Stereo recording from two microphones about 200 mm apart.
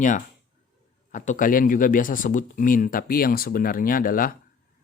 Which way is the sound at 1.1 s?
40° left (ahead or behind).